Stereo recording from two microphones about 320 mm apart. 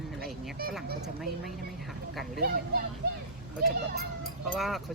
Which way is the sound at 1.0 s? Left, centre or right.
Centre.